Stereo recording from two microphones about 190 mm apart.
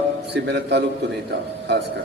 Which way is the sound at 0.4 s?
65° right (ahead or behind).